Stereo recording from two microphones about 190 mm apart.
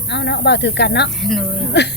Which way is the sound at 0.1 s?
65° left (ahead or behind).